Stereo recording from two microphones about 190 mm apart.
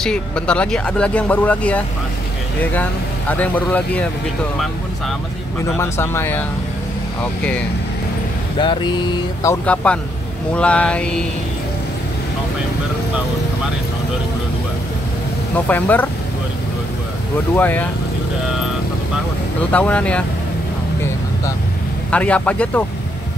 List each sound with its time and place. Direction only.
0.0 s speech: 5° left (ahead or behind)
5.8 s speech: 15° left (ahead or behind)
8.5 s speech: 25° left (ahead or behind); by 11.2 s 5° left (ahead or behind)
15.5 s speech: 10° left (ahead or behind)
17.6 s speech: 10° left (ahead or behind)
19.7 s speech: 5° left (ahead or behind)
22.1 s speech: 5° left (ahead or behind)